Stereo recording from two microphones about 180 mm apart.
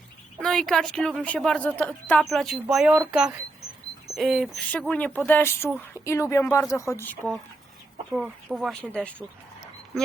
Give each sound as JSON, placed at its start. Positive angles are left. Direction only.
{"t": 0.3, "sound": "a woman's voice", "side_deg": 5}
{"t": 4.1, "sound": "speech", "side_deg": 0}
{"t": 8.1, "sound": "a woman's voice", "side_deg": -5}
{"t": 9.1, "sound": "dog", "side_deg": 0}